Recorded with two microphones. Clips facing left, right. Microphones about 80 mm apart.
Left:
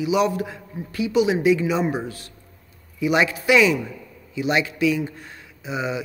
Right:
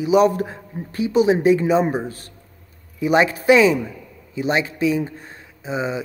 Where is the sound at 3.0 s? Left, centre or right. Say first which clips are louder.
Right 3 dB; right.